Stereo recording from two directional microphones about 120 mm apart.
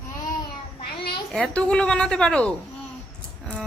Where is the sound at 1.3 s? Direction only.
10° left (ahead or behind).